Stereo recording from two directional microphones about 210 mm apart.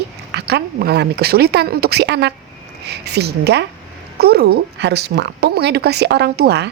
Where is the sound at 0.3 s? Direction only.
50° right (ahead or behind).